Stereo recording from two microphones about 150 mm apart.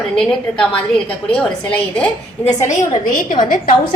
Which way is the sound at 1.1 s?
10° left (ahead or behind).